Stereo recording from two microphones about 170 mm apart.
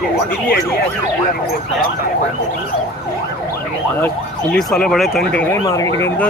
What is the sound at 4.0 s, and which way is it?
Speech, 5° left (ahead or behind).